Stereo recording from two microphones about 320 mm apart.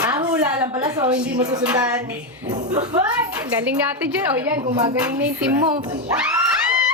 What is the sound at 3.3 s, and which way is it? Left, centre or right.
A woman's voice, centre.